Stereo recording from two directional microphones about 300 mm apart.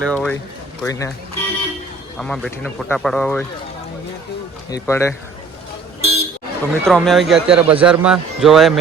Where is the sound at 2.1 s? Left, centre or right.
Centre.